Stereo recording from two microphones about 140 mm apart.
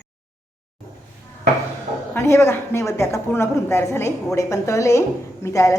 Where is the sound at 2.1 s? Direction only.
20° left (ahead or behind).